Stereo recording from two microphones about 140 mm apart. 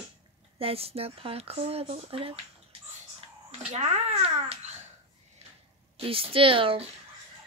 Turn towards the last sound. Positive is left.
turn(degrees=-40)  # may be behind; listen again after turning